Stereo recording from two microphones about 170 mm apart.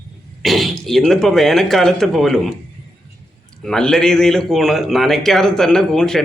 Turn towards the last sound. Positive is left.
turn(degrees=5)  # may be behind; listen again after turning